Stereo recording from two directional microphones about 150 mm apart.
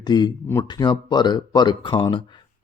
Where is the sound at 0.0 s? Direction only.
30° left (ahead or behind).